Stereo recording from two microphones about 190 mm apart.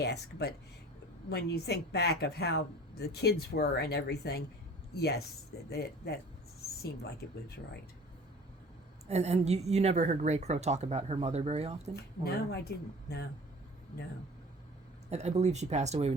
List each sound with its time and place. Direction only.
0.0 s speech: 60° left (ahead or behind)
9.0 s a woman's voice: 35° right (ahead or behind)
11.9 s speech: 55° left (ahead or behind)
15.1 s a woman's voice: 35° right (ahead or behind)